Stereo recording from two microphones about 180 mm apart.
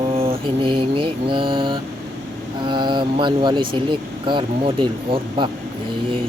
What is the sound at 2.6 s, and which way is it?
Speech, 25° right (ahead or behind).